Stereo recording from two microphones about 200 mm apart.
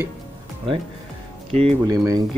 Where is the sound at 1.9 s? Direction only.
15° right (ahead or behind).